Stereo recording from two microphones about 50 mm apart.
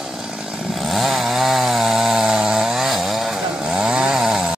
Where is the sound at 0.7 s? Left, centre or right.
Centre.